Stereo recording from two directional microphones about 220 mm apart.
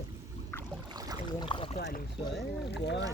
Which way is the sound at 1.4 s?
25° left (ahead or behind).